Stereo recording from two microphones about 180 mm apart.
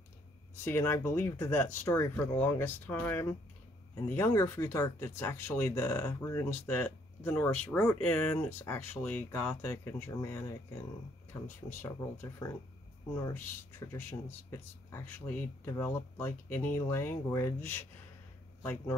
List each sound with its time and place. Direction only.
0.7 s speech: 15° left (ahead or behind)